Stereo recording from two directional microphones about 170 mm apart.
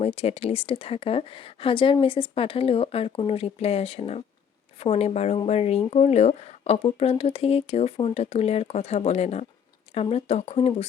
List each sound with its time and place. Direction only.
0.0 s speech: 35° left (ahead or behind)